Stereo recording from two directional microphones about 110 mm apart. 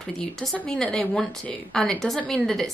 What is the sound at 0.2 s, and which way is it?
Speech, 5° left (ahead or behind).